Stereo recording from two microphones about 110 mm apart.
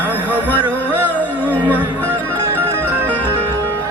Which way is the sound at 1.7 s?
15° right (ahead or behind).